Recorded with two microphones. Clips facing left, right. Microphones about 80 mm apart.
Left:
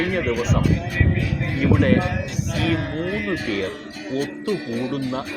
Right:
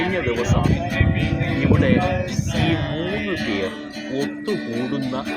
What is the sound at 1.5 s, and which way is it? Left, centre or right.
Speech, centre.